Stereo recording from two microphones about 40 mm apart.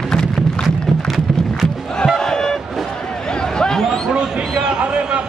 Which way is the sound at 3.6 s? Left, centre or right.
Centre.